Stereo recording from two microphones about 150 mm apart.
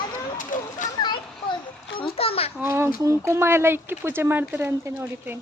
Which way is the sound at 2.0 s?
40° left (ahead or behind).